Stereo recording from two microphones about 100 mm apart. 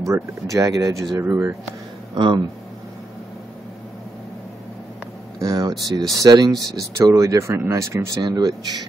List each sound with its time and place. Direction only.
0.0 s speech: 30° right (ahead or behind)
1.2 s speech: 20° right (ahead or behind)
2.1 s speech: 55° right (ahead or behind)
5.4 s speech: 35° right (ahead or behind)
8.2 s speech: 45° right (ahead or behind)